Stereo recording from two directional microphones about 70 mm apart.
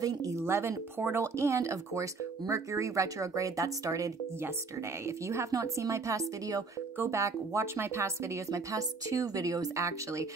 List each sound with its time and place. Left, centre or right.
0.0 s speech: right
0.4 s a woman's voice: right